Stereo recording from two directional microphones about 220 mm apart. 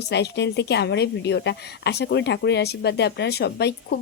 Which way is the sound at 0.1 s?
50° left (ahead or behind).